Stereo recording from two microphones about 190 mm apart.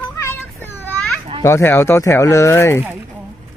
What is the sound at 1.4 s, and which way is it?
Speech, 15° left (ahead or behind).